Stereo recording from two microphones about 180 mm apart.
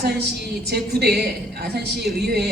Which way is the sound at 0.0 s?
65° right (ahead or behind).